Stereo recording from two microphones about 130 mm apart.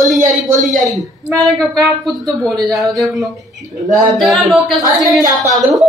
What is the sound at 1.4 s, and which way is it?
Speech, 25° right (ahead or behind).